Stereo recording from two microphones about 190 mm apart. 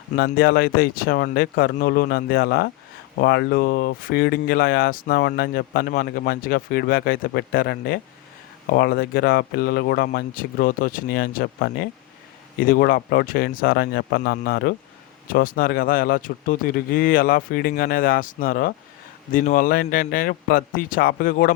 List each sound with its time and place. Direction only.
0.2 s speech: 60° left (ahead or behind)